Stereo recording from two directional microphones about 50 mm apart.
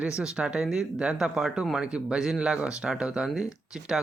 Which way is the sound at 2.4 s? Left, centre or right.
Right.